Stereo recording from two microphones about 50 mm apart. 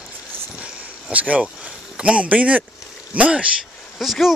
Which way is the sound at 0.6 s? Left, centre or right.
Right.